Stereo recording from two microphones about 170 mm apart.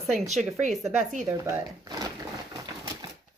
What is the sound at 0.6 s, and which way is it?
Speech, 45° right (ahead or behind).